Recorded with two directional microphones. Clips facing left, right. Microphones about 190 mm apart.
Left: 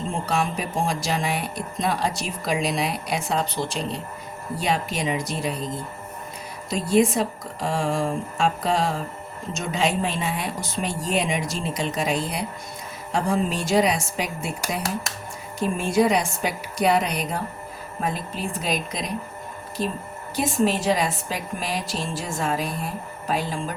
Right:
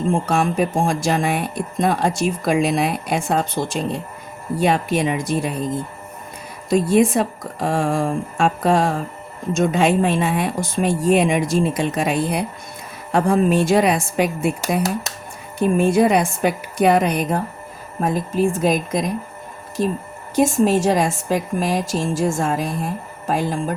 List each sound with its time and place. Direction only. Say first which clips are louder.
0.1 s speech: right 5 dB; 50° right (ahead or behind)
6.7 s speech: right 5 dB; 50° right (ahead or behind)
15.5 s speech: right 6 dB; 55° right (ahead or behind)
20.3 s speech: right 6 dB; 45° right (ahead or behind)